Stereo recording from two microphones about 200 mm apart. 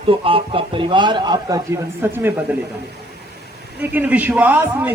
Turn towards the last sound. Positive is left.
turn(degrees=-10)  # may be behind; listen again after turning